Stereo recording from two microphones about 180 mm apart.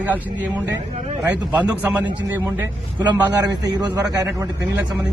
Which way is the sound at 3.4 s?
20° right (ahead or behind).